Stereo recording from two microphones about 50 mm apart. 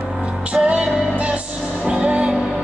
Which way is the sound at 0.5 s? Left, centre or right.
Centre.